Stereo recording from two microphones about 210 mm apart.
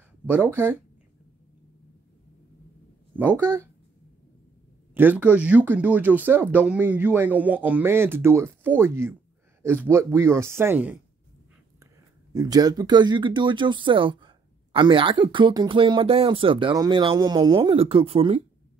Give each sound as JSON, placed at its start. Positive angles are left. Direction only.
{"t": 0.3, "sound": "speech", "side_deg": -10}
{"t": 3.2, "sound": "speech", "side_deg": -10}
{"t": 4.9, "sound": "speech", "side_deg": -10}
{"t": 12.4, "sound": "speech", "side_deg": -20}